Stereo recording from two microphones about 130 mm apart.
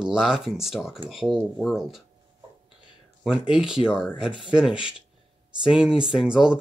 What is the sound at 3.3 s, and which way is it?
Speech, 5° right (ahead or behind).